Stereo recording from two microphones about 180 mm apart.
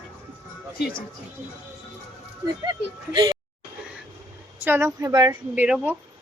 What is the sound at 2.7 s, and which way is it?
Speech, 25° right (ahead or behind).